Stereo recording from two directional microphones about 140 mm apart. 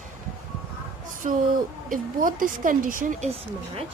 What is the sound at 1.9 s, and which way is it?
Speech, 75° right (ahead or behind).